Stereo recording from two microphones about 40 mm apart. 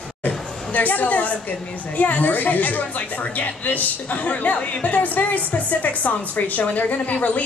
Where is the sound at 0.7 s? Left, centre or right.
Left.